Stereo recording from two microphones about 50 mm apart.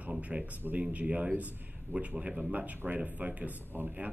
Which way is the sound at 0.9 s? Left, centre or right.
Right.